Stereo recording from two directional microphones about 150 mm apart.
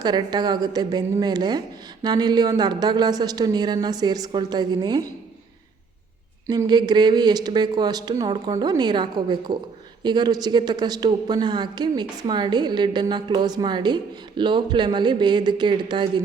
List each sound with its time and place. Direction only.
0.0 s speech: 30° right (ahead or behind)
6.5 s speech: 30° right (ahead or behind)